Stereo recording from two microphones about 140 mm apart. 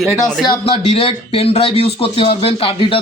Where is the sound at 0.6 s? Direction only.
45° left (ahead or behind).